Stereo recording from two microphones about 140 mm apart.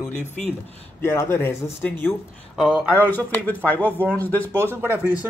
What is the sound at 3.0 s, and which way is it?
Speech, 10° left (ahead or behind).